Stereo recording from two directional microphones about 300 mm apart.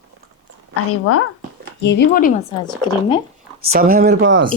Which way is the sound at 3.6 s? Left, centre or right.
Right.